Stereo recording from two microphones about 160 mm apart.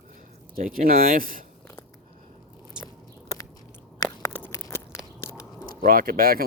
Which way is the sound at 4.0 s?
15° left (ahead or behind).